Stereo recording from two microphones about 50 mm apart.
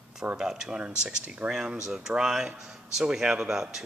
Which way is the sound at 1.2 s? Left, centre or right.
Right.